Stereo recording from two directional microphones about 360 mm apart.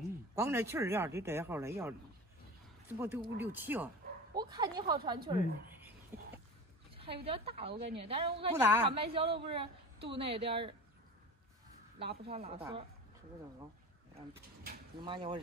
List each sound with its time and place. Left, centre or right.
0.4 s a woman's voice: centre
12.1 s a woman's voice: centre
15.0 s a woman's voice: centre